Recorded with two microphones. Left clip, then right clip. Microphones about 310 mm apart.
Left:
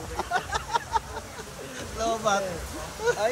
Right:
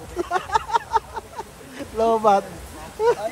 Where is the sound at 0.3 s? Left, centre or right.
Right.